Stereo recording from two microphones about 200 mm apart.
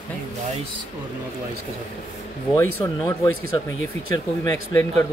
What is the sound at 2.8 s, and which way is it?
Speech, 20° left (ahead or behind).